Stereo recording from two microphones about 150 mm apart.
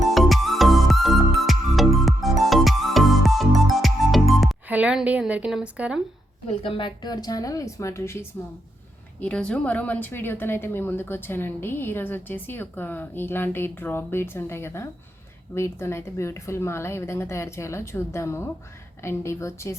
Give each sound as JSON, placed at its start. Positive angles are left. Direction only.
{"t": 0.0, "sound": "music", "side_deg": 0}
{"t": 4.7, "sound": "a woman's voice", "side_deg": -10}
{"t": 6.6, "sound": "a woman's voice", "side_deg": 35}